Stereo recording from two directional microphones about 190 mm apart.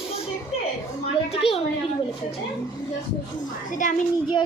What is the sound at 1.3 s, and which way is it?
Speech, 30° left (ahead or behind).